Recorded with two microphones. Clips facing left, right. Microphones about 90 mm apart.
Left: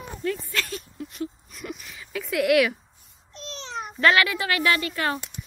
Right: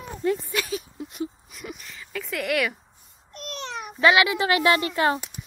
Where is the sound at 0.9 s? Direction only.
25° right (ahead or behind).